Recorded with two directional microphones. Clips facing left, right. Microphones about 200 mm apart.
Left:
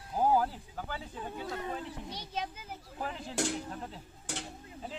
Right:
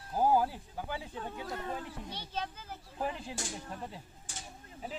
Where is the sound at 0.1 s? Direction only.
5° right (ahead or behind).